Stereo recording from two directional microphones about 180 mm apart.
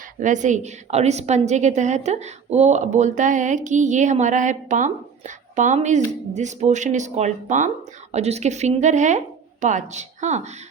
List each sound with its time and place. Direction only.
0.2 s a woman's voice: 45° right (ahead or behind)